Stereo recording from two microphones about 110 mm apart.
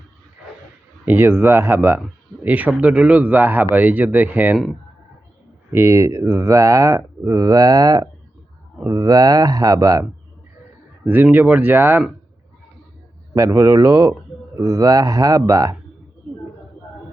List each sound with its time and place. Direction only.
1.0 s speech: 20° right (ahead or behind)
5.7 s speech: 25° right (ahead or behind)
11.0 s speech: 15° right (ahead or behind)
13.3 s speech: 30° right (ahead or behind)